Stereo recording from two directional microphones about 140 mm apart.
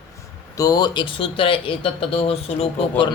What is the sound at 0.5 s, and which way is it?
Speech, 25° left (ahead or behind).